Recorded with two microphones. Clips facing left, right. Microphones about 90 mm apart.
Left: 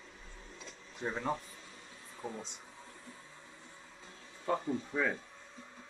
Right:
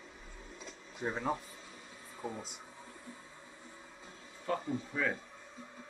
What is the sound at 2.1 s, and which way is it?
Speech, 5° right (ahead or behind).